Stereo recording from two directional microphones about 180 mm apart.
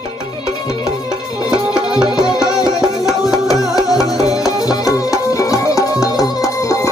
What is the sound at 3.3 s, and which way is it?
Music, 20° left (ahead or behind).